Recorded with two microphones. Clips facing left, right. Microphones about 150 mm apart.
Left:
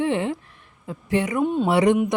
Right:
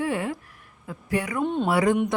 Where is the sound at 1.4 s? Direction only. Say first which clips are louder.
Left 2 dB; 5° left (ahead or behind).